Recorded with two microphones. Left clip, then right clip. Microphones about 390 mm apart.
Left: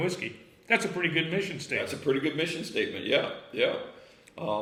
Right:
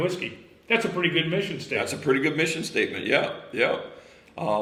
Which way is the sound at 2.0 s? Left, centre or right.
Centre.